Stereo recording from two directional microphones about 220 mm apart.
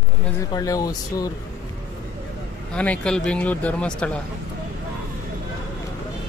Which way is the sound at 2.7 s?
5° left (ahead or behind).